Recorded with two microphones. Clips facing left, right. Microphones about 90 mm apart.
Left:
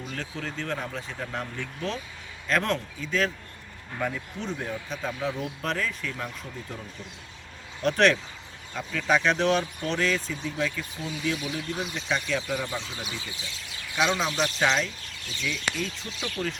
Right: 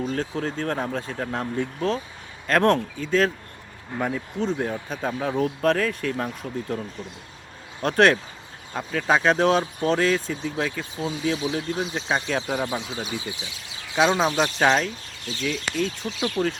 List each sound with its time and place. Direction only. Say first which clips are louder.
0.0 s speech: right 8 dB; 40° right (ahead or behind)
2.5 s speech: right 7 dB; 50° right (ahead or behind)
7.8 s speech: right 3 dB; 45° right (ahead or behind)
13.1 s speech: right 6 dB; 20° right (ahead or behind)
13.9 s speech: right 6 dB; 35° right (ahead or behind)